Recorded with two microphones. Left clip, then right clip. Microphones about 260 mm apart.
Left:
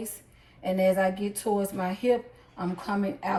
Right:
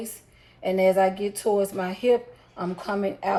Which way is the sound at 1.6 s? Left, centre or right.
Centre.